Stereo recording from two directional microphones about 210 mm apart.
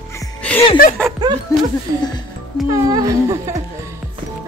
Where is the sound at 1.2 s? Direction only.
20° right (ahead or behind).